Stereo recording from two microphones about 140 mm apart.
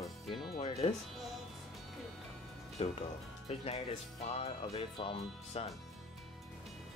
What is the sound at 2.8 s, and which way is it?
Speech, 45° left (ahead or behind).